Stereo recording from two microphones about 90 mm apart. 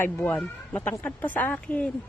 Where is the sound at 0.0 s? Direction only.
25° left (ahead or behind).